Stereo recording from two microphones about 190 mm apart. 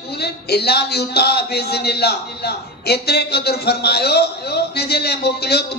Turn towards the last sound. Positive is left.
turn(degrees=60)  # may be behind; listen again after turning